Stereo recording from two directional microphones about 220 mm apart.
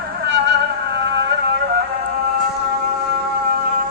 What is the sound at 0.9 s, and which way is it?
Music, 50° right (ahead or behind).